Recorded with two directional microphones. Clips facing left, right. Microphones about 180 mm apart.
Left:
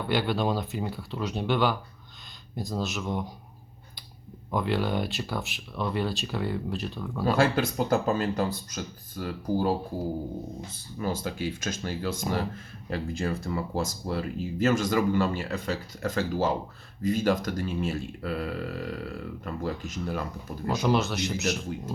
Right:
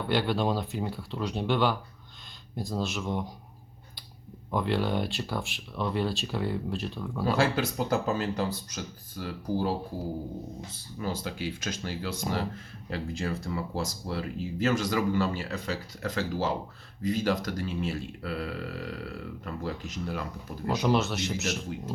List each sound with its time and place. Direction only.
0.0 s speech: centre (ahead or behind)
4.5 s speech: centre (ahead or behind)
7.3 s speech: 50° left (ahead or behind)
20.7 s speech: centre (ahead or behind)